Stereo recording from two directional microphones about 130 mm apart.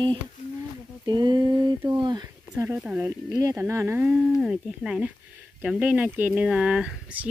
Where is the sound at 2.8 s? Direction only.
10° right (ahead or behind).